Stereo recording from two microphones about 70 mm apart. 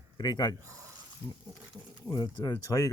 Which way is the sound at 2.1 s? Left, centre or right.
Left.